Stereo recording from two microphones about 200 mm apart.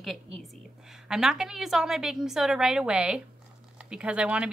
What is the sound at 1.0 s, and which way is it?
A woman's voice, centre (ahead or behind).